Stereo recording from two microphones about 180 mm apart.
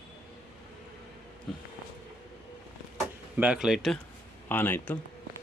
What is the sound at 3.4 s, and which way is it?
Speech, 5° right (ahead or behind).